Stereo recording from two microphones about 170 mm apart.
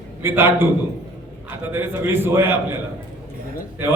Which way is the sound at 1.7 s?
15° right (ahead or behind).